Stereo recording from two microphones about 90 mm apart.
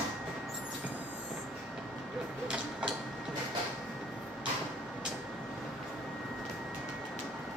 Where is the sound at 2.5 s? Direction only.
10° right (ahead or behind).